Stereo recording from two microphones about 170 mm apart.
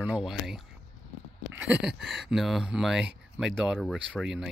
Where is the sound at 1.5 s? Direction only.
5° right (ahead or behind).